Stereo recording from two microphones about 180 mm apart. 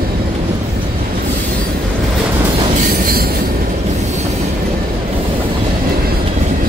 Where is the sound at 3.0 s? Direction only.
55° right (ahead or behind).